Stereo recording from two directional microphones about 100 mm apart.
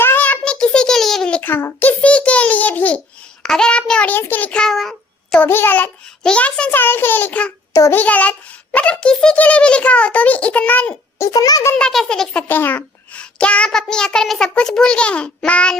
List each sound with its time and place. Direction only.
0.0 s a sound: 20° left (ahead or behind)
1.4 s a child's voice: 20° left (ahead or behind)
3.4 s child singing: 5° left (ahead or behind)
5.4 s a child's voice: 20° left (ahead or behind)
7.7 s a child's voice: 35° left (ahead or behind)
7.9 s a child's voice: 15° left (ahead or behind)
11.2 s a child's voice: 40° left (ahead or behind)
11.9 s a child's voice: 5° left (ahead or behind)